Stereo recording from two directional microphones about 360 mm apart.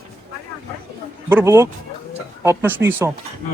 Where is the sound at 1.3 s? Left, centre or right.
Centre.